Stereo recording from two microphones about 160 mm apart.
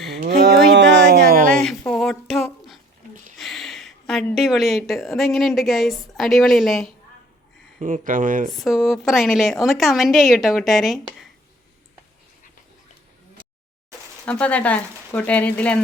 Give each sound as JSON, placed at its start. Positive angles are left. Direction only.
{"t": 0.3, "sound": "a sound", "side_deg": -80}
{"t": 1.5, "sound": "a sound", "side_deg": 5}
{"t": 3.3, "sound": "a woman's voice", "side_deg": 0}
{"t": 8.0, "sound": "speech", "side_deg": -60}
{"t": 8.4, "sound": "a woman's voice", "side_deg": 0}
{"t": 14.3, "sound": "speech", "side_deg": 10}